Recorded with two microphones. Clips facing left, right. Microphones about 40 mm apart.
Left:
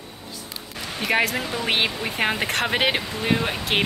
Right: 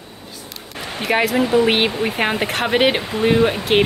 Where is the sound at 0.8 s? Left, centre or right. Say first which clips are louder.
Right 3 dB; right.